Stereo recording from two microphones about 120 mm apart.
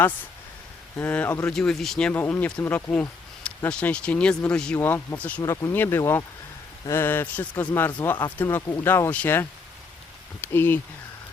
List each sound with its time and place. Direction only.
0.9 s speech: 15° left (ahead or behind)
1.5 s speech: 5° left (ahead or behind)
4.8 s speech: 15° left (ahead or behind)
5.4 s speech: 25° left (ahead or behind)